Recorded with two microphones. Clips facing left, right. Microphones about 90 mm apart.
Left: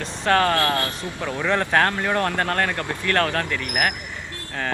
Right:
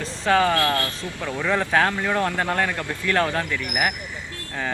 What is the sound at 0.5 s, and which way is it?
Speech, 20° left (ahead or behind).